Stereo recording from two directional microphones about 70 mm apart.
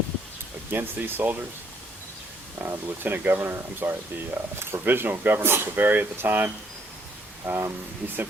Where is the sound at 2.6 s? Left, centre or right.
Right.